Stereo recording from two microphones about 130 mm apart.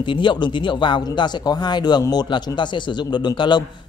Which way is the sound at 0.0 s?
40° left (ahead or behind).